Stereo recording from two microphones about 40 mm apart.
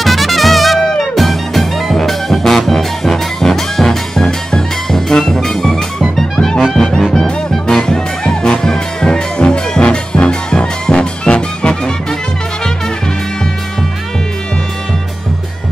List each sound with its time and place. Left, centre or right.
0.0 s music: centre